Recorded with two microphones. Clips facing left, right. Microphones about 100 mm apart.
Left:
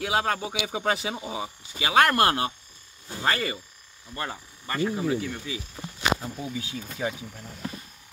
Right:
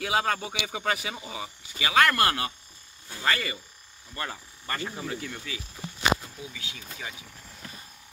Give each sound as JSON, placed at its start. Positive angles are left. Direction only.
{"t": 0.0, "sound": "speech", "side_deg": 10}
{"t": 4.1, "sound": "speech", "side_deg": 15}
{"t": 6.2, "sound": "speech", "side_deg": 40}